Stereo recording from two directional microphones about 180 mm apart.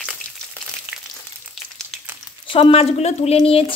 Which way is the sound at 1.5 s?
Centre (ahead or behind).